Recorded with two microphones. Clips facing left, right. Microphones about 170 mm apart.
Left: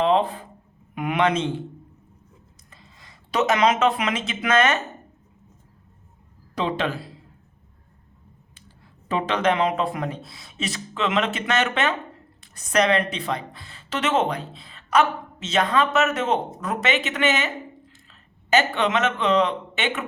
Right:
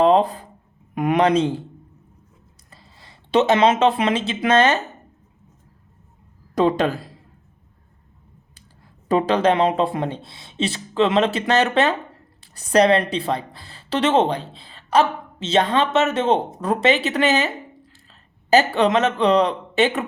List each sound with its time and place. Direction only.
0.0 s a sound: 40° right (ahead or behind)
0.9 s speech: 40° right (ahead or behind)
2.6 s speech: 35° right (ahead or behind)
6.5 s speech: 45° right (ahead or behind)
9.0 s speech: 35° right (ahead or behind)